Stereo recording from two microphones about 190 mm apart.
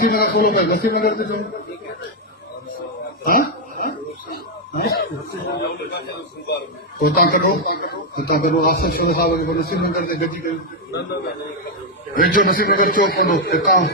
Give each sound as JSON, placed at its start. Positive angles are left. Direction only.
{"t": 0.0, "sound": "a man's voice", "side_deg": 55}
{"t": 3.2, "sound": "a sound", "side_deg": 50}
{"t": 4.8, "sound": "a man's voice", "side_deg": 55}
{"t": 12.1, "sound": "a man's voice", "side_deg": 50}